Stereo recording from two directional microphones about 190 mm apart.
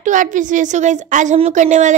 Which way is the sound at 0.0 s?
40° right (ahead or behind).